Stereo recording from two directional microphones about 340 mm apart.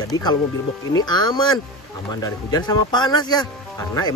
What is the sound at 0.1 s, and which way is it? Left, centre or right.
Speech, centre.